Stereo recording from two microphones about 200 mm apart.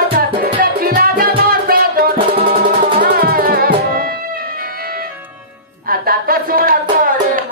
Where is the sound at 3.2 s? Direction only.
50° right (ahead or behind).